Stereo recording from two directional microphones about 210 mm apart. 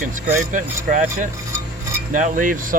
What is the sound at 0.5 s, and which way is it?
Speech, 40° right (ahead or behind).